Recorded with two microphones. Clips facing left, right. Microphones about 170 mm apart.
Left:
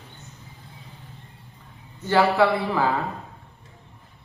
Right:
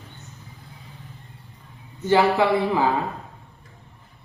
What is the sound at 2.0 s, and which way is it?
Speech, 15° right (ahead or behind).